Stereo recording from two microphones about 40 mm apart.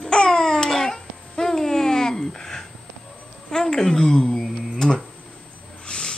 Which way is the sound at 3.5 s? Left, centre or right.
Centre.